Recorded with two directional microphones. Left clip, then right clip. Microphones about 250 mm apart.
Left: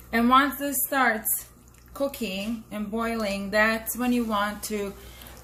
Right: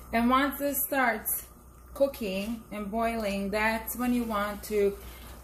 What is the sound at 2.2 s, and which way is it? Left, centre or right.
Speech, left.